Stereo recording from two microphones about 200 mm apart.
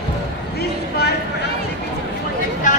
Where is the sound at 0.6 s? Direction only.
55° left (ahead or behind).